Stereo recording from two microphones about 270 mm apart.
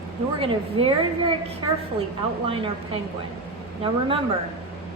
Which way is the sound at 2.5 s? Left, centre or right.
Centre.